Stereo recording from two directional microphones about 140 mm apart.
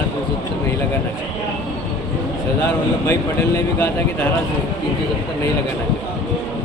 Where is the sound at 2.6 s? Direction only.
20° left (ahead or behind).